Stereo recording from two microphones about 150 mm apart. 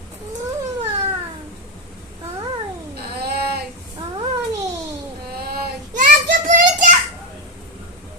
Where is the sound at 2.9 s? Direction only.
90° right.